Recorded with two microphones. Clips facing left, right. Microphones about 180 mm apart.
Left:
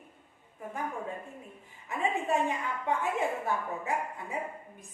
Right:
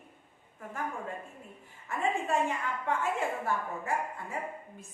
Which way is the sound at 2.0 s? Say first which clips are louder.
Left 1 dB; 15° left (ahead or behind).